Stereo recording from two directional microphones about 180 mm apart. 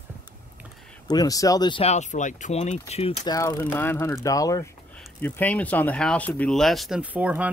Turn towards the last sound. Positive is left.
turn(degrees=-10)  # may be behind; listen again after turning